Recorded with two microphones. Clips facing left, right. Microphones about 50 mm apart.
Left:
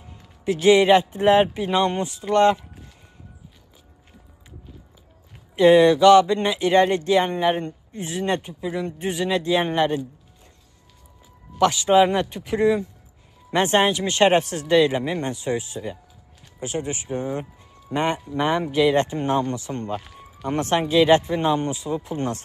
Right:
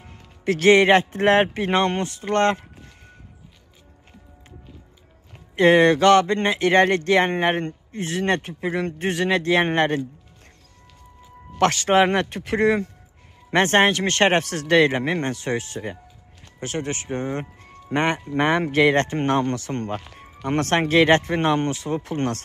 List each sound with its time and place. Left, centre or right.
0.0 s speech: right
5.6 s speech: right
11.5 s speech: right